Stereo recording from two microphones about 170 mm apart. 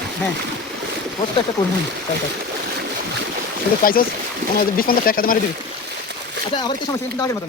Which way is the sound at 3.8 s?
55° left (ahead or behind).